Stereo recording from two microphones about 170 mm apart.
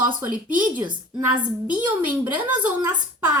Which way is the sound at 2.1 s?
10° right (ahead or behind).